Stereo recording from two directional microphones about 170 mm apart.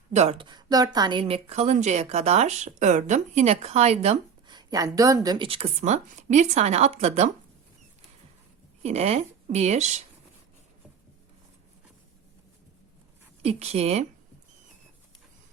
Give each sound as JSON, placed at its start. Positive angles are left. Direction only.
{"t": 0.1, "sound": "a woman's voice", "side_deg": -40}
{"t": 4.4, "sound": "a woman's voice", "side_deg": -25}
{"t": 8.8, "sound": "a woman's voice", "side_deg": -40}
{"t": 13.4, "sound": "a woman's voice", "side_deg": -40}